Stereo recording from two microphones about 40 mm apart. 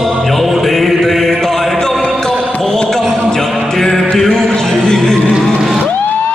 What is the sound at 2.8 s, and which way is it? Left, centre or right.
Music, centre.